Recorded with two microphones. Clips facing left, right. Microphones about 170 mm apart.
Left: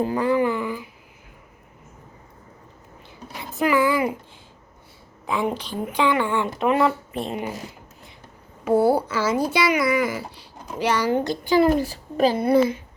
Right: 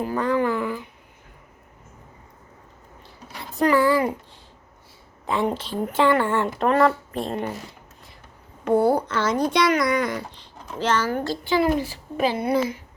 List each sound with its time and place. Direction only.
0.2 s a woman's voice: 10° left (ahead or behind)
3.7 s a woman's voice: 5° left (ahead or behind)
5.2 s a woman's voice: centre (ahead or behind)
8.6 s a woman's voice: 5° left (ahead or behind)
11.5 s a woman's voice: 45° left (ahead or behind)
12.5 s a woman's voice: 30° left (ahead or behind)